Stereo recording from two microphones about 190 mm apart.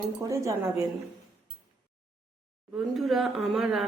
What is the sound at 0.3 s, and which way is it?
Speech, 15° right (ahead or behind).